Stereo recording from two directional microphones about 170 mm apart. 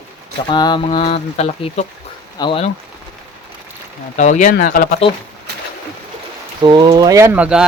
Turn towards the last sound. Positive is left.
turn(degrees=-5)  # may be behind; listen again after turning